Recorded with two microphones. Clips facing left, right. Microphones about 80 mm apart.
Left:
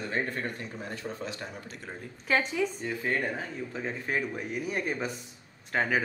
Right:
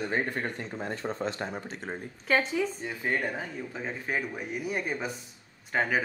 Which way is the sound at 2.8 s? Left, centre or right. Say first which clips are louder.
Even; centre.